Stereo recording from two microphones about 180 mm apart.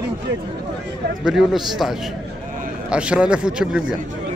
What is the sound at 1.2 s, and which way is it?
Speech, centre (ahead or behind).